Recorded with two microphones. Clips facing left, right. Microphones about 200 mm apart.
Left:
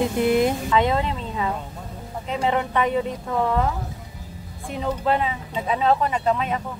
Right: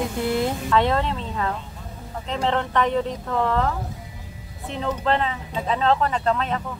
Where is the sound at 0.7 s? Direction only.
5° left (ahead or behind).